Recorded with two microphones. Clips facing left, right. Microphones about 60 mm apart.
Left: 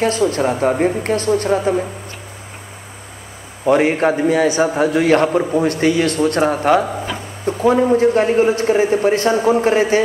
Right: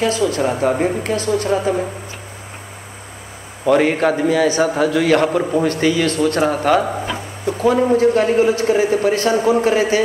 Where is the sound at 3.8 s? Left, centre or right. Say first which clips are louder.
Left 1 dB; left.